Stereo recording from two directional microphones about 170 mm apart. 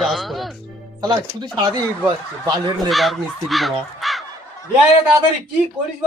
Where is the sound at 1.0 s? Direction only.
25° right (ahead or behind).